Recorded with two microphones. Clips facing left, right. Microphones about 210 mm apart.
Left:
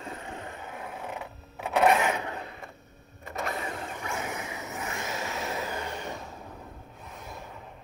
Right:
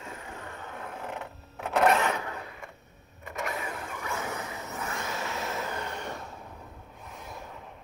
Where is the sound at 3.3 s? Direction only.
35° left (ahead or behind); by 4.8 s 15° left (ahead or behind).